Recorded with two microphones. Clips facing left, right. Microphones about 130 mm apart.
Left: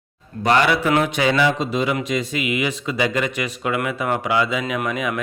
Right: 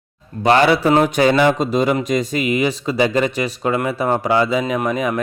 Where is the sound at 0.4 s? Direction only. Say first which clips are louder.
Right 4 dB; 30° right (ahead or behind).